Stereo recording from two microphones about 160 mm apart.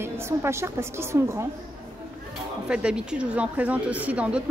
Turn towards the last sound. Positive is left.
turn(degrees=-5)  # may be behind; listen again after turning